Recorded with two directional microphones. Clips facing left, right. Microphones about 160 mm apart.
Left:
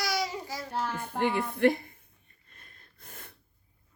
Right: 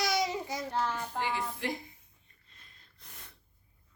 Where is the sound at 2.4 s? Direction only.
55° left (ahead or behind).